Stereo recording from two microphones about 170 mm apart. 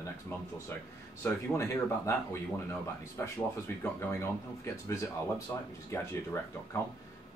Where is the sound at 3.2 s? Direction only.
10° left (ahead or behind).